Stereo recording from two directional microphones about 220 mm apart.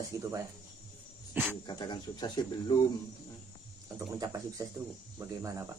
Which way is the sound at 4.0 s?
15° right (ahead or behind).